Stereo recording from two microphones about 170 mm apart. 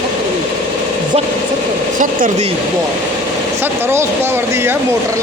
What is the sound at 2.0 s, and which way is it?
Speech, 50° right (ahead or behind).